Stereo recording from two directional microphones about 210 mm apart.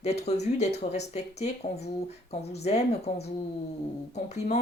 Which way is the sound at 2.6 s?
30° left (ahead or behind).